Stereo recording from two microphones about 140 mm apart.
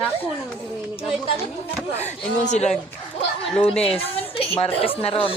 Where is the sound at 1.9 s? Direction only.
55° left (ahead or behind).